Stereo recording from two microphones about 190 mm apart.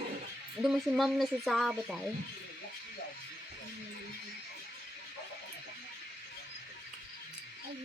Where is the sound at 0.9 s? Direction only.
Centre (ahead or behind).